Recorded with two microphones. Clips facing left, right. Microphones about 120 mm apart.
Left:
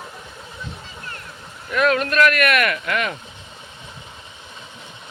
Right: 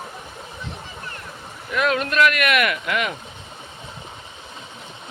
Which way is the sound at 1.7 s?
15° right (ahead or behind).